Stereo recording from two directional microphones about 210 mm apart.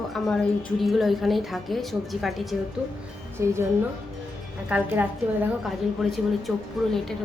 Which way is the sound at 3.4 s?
15° right (ahead or behind).